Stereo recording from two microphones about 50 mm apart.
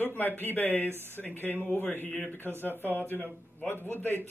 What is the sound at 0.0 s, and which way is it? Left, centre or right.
Speech, left.